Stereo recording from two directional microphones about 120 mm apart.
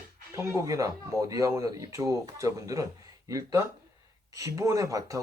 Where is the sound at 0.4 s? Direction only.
25° right (ahead or behind).